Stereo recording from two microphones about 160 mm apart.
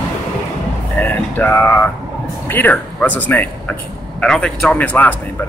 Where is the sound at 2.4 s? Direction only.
10° left (ahead or behind).